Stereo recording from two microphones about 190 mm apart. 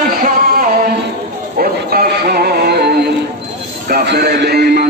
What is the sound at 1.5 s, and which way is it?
Music, 50° right (ahead or behind).